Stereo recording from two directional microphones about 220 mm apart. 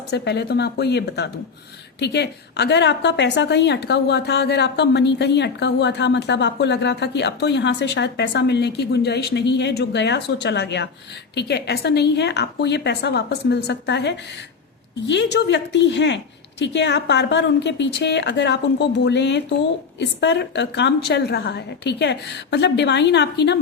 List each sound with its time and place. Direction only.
0.1 s a woman's voice: 50° left (ahead or behind)